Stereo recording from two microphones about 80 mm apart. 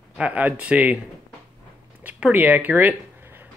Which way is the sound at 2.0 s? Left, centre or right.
Right.